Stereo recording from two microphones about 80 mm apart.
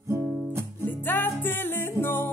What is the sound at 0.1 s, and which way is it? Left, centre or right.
Music, right.